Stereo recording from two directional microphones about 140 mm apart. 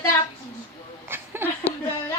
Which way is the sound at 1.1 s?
15° right (ahead or behind).